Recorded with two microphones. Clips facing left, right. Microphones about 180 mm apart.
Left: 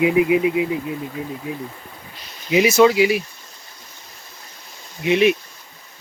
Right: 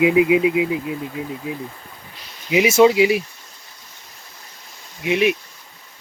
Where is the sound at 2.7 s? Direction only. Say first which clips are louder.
Right 1 dB; 25° right (ahead or behind).